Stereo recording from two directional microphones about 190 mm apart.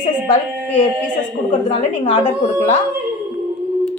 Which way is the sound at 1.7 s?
35° left (ahead or behind).